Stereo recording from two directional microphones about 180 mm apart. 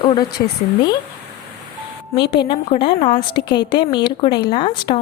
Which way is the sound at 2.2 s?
65° left (ahead or behind).